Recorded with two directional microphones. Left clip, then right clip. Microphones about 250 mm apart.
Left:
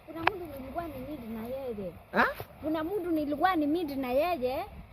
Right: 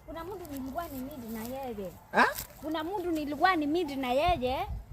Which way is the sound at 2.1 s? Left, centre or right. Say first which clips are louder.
Right 2 dB; centre.